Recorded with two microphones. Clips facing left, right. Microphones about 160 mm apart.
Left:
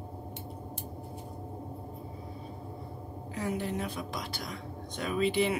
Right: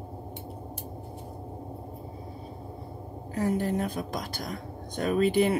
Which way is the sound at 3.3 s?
45° right (ahead or behind).